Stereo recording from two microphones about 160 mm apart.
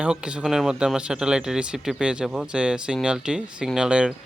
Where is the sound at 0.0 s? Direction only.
5° right (ahead or behind).